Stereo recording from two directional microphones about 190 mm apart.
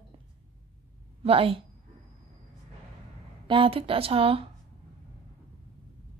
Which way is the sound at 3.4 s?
25° right (ahead or behind).